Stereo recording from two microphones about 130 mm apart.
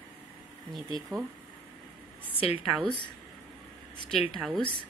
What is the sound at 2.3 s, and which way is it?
Speech, 45° left (ahead or behind).